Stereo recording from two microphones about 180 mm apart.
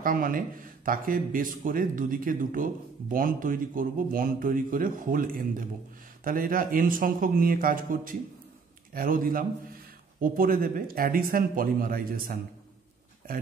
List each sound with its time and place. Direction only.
0.0 s speech: 50° right (ahead or behind)